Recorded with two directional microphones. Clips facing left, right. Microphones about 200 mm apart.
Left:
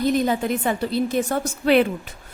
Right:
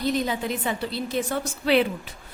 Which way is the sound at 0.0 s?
50° left (ahead or behind).